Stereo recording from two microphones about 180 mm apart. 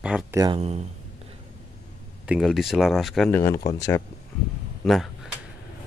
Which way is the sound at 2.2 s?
Centre (ahead or behind).